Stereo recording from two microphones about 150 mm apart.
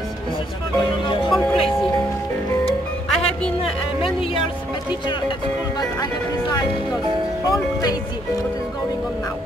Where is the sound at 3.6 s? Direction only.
35° left (ahead or behind).